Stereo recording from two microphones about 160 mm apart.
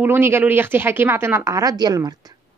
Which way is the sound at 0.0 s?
15° right (ahead or behind).